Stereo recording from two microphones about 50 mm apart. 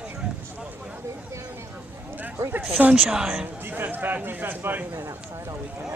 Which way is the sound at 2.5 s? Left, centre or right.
Right.